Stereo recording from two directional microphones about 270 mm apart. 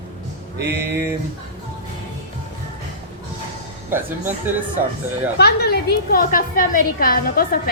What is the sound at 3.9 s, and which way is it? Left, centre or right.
Speech, centre.